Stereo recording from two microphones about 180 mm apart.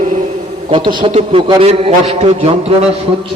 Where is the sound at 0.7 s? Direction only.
25° right (ahead or behind).